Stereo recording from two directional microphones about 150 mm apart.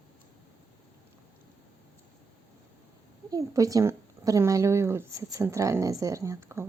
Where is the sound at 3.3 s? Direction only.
20° right (ahead or behind).